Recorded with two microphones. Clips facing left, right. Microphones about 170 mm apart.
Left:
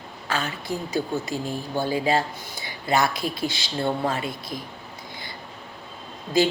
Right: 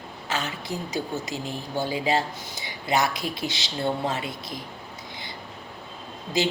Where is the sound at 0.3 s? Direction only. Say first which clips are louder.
Left 2 dB; 20° right (ahead or behind).